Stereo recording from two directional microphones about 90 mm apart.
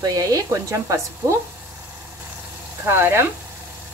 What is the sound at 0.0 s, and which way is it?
Speech, 40° right (ahead or behind).